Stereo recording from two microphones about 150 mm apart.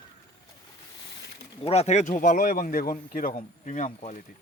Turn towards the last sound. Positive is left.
turn(degrees=55)  # may be behind; listen again after turning